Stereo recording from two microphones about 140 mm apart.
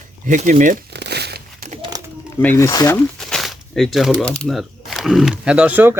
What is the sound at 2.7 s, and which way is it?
Speech, 25° left (ahead or behind).